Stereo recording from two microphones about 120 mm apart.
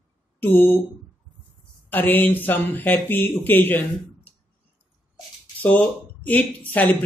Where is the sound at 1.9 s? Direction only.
15° left (ahead or behind).